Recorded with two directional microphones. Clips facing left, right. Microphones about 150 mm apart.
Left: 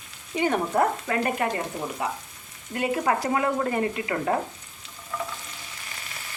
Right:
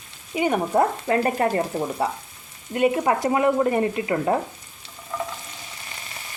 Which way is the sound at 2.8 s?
25° right (ahead or behind).